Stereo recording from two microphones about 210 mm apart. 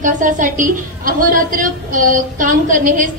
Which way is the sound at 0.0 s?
40° right (ahead or behind).